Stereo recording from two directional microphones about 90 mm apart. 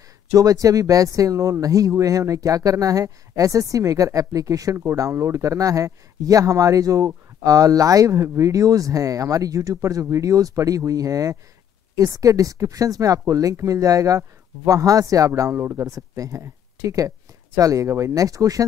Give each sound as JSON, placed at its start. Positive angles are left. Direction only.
{"t": 0.3, "sound": "speech", "side_deg": -40}